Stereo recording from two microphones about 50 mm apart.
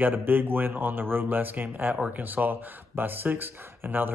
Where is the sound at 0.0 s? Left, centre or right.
Right.